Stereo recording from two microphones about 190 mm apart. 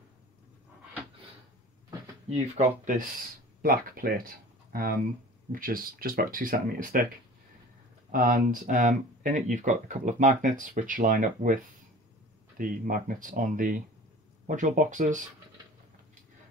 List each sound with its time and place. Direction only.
2.3 s speech: 35° right (ahead or behind)
3.6 s speech: 50° right (ahead or behind)
8.1 s speech: 45° right (ahead or behind)